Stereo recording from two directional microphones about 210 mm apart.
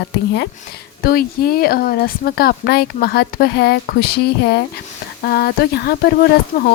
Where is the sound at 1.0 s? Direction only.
45° left (ahead or behind).